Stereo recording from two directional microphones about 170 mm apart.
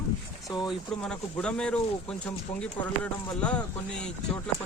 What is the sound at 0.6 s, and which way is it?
Speech, 5° left (ahead or behind).